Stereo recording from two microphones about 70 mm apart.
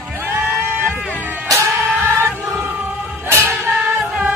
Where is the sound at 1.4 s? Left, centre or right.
Right.